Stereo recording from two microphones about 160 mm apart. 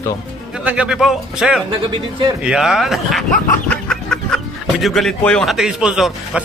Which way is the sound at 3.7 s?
5° left (ahead or behind).